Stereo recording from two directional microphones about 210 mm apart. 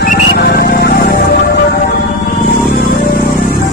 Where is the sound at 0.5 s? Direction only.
50° left (ahead or behind).